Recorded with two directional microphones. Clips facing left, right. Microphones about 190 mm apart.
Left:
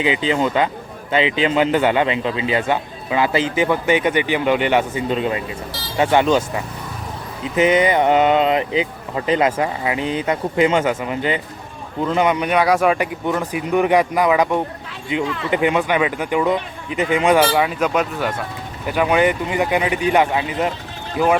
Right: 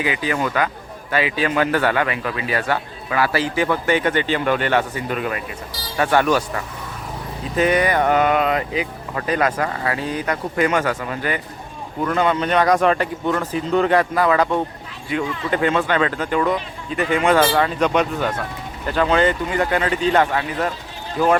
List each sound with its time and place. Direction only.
0.0 s a man's voice: 20° left (ahead or behind)